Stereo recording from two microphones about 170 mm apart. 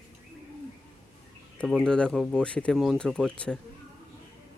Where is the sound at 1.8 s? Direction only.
5° left (ahead or behind).